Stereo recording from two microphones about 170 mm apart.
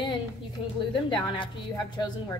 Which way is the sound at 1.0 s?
30° left (ahead or behind).